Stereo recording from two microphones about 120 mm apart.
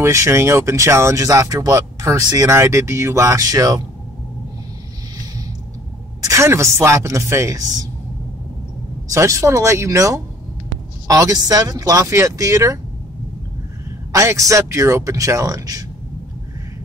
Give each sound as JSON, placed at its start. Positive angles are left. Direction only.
{"t": 0.0, "sound": "speech", "side_deg": -25}
{"t": 6.2, "sound": "speech", "side_deg": -25}
{"t": 9.1, "sound": "speech", "side_deg": -25}
{"t": 14.1, "sound": "speech", "side_deg": -25}